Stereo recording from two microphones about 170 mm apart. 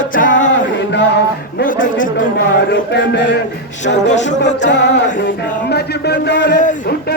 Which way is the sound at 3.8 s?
45° left (ahead or behind).